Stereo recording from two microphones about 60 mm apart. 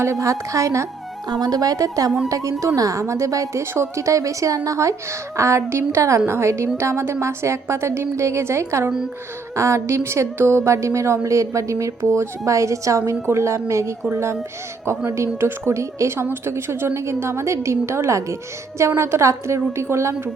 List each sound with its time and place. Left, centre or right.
0.0 s a woman's voice: right
1.4 s a woman's voice: right
2.3 s a woman's voice: right
5.4 s a woman's voice: right